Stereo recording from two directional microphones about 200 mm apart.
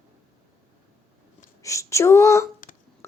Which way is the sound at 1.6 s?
15° left (ahead or behind).